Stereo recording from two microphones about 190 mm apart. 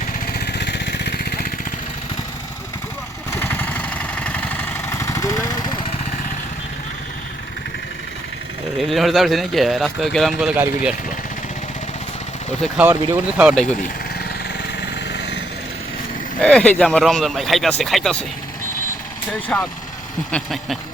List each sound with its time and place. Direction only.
0.3 s vehicle: 60° left (ahead or behind)
3.3 s vehicle: 10° left (ahead or behind)
8.8 s speech: centre (ahead or behind)
10.5 s speech: 10° right (ahead or behind)
12.6 s speech: 5° right (ahead or behind)
14.8 s a sound: 65° left (ahead or behind)
16.4 s speech: 5° left (ahead or behind)
19.3 s speech: 5° left (ahead or behind)